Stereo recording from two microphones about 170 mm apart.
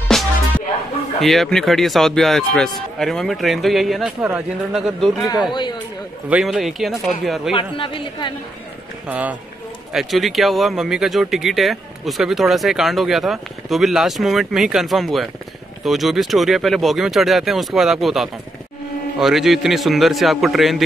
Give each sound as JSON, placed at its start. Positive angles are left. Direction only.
{"t": 0.1, "sound": "music", "side_deg": 0}
{"t": 1.2, "sound": "speech", "side_deg": 0}
{"t": 5.5, "sound": "a man's voice", "side_deg": 25}
{"t": 6.2, "sound": "speech", "side_deg": -5}
{"t": 7.5, "sound": "a man's voice", "side_deg": 30}
{"t": 9.0, "sound": "speech", "side_deg": -10}